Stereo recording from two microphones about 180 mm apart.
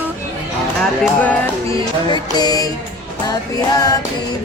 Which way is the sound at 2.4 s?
20° left (ahead or behind).